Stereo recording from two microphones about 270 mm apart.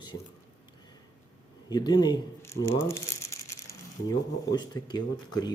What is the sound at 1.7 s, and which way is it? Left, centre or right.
Speech, centre.